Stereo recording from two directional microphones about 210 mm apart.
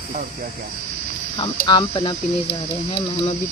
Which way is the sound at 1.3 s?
25° left (ahead or behind).